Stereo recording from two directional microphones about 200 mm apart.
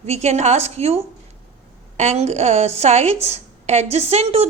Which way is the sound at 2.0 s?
35° right (ahead or behind).